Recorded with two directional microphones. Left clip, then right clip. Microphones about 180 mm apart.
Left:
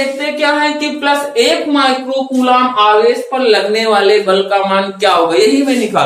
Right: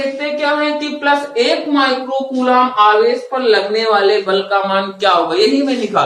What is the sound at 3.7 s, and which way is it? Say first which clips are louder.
Speech: left 3 dB; 20° left (ahead or behind).